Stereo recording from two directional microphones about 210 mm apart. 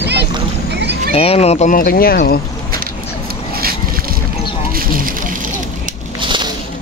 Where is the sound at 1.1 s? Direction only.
30° left (ahead or behind); by 2.4 s 45° left (ahead or behind).